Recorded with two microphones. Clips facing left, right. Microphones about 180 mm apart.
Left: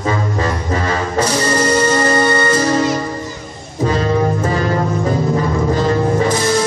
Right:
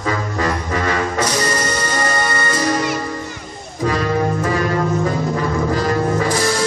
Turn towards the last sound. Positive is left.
turn(degrees=25)  # may be behind; listen again after turning